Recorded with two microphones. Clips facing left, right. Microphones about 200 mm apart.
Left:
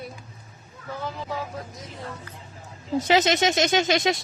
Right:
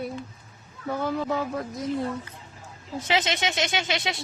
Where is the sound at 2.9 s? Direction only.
40° left (ahead or behind).